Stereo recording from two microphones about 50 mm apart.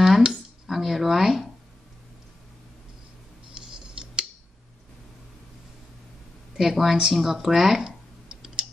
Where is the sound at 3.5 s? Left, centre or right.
Centre.